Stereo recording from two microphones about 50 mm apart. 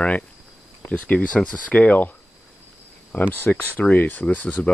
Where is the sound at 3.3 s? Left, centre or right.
Left.